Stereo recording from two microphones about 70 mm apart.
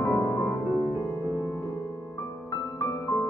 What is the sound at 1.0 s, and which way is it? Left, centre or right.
Music, right.